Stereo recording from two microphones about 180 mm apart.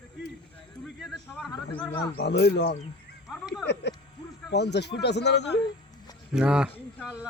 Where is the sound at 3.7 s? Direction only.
70° left (ahead or behind).